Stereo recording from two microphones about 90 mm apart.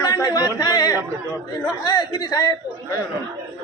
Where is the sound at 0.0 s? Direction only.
40° left (ahead or behind).